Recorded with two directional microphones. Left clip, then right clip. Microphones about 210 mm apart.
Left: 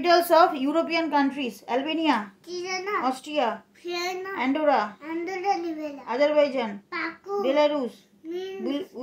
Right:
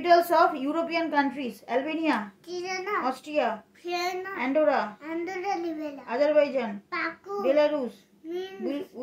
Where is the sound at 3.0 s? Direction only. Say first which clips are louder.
Left 1 dB; 30° left (ahead or behind).